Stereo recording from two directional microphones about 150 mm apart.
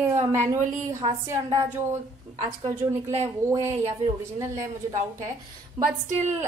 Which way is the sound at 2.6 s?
50° right (ahead or behind).